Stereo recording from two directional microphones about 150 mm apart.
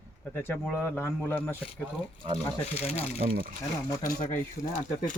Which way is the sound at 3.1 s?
90° right.